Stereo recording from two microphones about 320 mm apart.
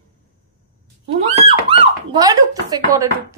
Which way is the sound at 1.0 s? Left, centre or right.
Centre.